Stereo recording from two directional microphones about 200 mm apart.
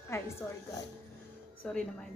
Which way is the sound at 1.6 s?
5° left (ahead or behind).